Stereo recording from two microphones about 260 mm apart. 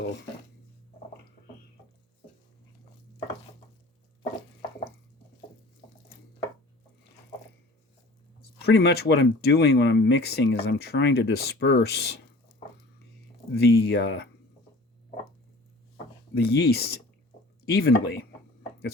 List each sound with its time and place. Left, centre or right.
8.6 s speech: left
13.5 s speech: left
16.4 s speech: left